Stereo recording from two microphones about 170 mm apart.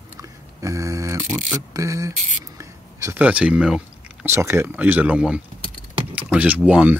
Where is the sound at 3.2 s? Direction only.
5° right (ahead or behind).